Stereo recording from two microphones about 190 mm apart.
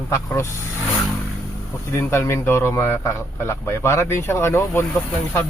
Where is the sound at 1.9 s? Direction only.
15° left (ahead or behind).